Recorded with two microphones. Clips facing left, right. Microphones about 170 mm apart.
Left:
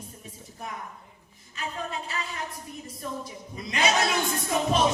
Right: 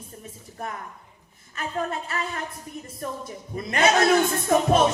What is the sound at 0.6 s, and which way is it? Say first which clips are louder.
Speech: right 4 dB; 55° right (ahead or behind).